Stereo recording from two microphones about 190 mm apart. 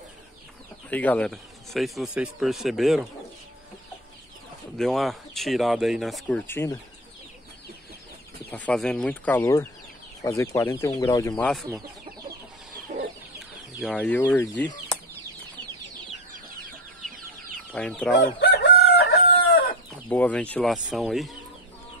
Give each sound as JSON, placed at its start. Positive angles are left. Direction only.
{"t": 0.8, "sound": "speech", "side_deg": 10}
{"t": 4.7, "sound": "speech", "side_deg": 0}
{"t": 8.5, "sound": "speech", "side_deg": 5}
{"t": 11.3, "sound": "speech", "side_deg": 5}
{"t": 13.7, "sound": "speech", "side_deg": 5}
{"t": 17.7, "sound": "speech", "side_deg": 5}
{"t": 18.1, "sound": "chicken", "side_deg": 60}
{"t": 20.1, "sound": "speech", "side_deg": 5}